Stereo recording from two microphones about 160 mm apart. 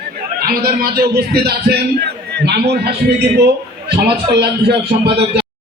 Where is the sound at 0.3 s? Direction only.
70° right (ahead or behind).